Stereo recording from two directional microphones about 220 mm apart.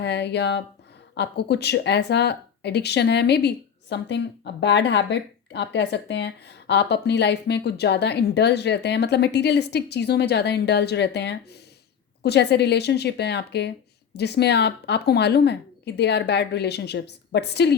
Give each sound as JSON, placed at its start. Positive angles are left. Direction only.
{"t": 0.0, "sound": "speech", "side_deg": 50}